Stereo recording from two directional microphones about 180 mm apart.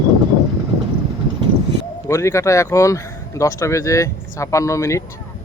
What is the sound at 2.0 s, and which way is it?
Speech, 15° left (ahead or behind).